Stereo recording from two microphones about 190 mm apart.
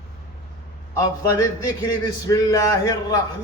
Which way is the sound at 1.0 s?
20° left (ahead or behind).